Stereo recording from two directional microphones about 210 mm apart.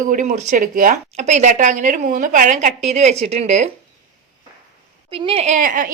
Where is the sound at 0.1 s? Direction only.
35° right (ahead or behind).